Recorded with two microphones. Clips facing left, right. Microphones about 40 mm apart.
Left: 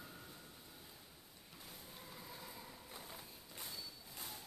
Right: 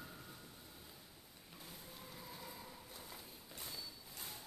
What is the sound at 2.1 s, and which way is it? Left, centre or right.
Vehicle, centre.